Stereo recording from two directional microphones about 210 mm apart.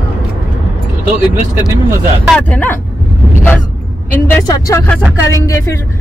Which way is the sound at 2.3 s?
5° left (ahead or behind).